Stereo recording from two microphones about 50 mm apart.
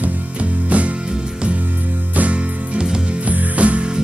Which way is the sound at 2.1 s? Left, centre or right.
Right.